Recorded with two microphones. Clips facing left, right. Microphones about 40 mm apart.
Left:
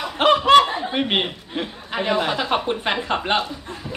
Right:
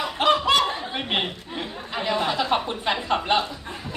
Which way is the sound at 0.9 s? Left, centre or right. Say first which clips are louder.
Left 7 dB; left.